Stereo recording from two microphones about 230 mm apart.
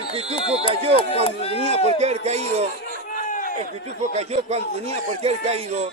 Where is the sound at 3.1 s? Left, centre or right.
Left.